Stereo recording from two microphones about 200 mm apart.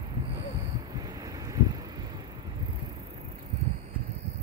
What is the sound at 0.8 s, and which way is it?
Vehicle, 20° right (ahead or behind).